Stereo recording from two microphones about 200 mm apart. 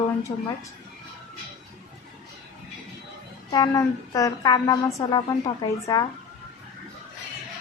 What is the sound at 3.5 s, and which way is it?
A woman's voice, 20° left (ahead or behind).